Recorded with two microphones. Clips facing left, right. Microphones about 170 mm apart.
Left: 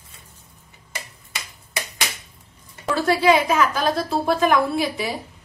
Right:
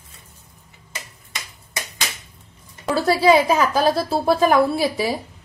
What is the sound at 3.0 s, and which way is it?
A woman's voice, 35° right (ahead or behind).